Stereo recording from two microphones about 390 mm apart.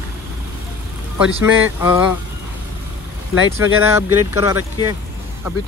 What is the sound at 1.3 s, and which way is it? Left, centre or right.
Speech, centre.